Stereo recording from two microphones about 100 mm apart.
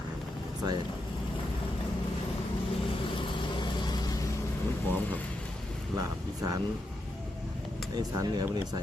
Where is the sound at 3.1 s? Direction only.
55° left (ahead or behind); by 4.2 s 40° left (ahead or behind).